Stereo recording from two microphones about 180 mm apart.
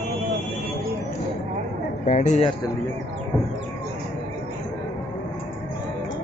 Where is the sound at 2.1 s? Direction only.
40° left (ahead or behind).